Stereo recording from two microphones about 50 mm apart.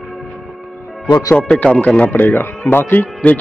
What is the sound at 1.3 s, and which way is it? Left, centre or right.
Speech, left.